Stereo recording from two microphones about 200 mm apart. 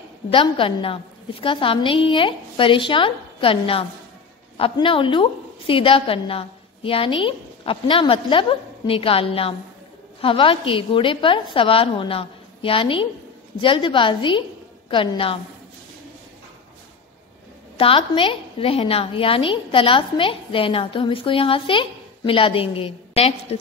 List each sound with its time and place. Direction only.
0.3 s a woman's voice: 25° left (ahead or behind)
17.7 s a woman's voice: 25° left (ahead or behind)